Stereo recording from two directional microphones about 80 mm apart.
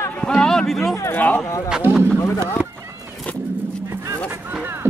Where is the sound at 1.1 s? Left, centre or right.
Left.